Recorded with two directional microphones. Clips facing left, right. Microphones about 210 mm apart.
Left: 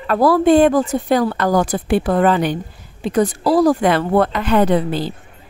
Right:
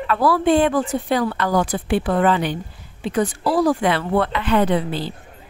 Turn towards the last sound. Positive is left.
turn(degrees=45)  # may be behind; listen again after turning